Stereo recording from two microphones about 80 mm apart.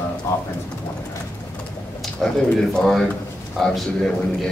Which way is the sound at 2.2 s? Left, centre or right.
Centre.